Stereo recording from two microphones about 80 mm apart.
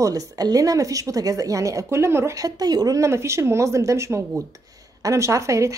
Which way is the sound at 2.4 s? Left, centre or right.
Right.